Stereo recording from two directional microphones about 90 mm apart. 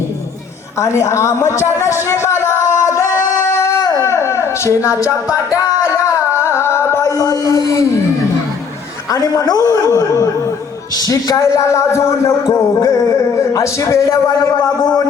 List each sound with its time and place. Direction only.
0.8 s speech: 35° left (ahead or behind)
2.4 s singing: 30° left (ahead or behind)
7.2 s speech: 45° left (ahead or behind)
9.1 s speech: 40° left (ahead or behind)